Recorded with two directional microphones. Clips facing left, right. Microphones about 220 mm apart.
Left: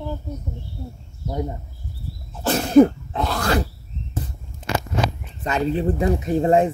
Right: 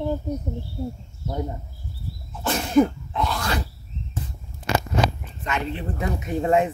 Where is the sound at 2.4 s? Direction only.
40° left (ahead or behind).